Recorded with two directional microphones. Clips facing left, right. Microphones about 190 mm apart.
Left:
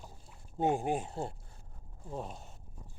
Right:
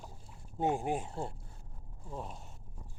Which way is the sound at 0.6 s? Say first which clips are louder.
Left 2 dB; 25° left (ahead or behind).